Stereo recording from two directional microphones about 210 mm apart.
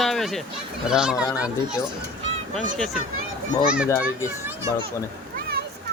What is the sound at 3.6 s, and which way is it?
Speech, 5° right (ahead or behind).